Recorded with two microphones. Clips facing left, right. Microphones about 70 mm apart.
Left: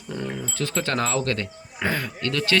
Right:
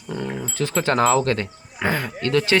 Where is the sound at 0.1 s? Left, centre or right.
Centre.